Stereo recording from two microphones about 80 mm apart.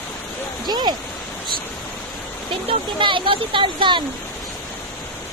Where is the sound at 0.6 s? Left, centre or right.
Right.